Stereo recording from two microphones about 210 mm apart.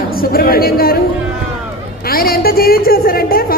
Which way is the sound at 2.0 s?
45° left (ahead or behind).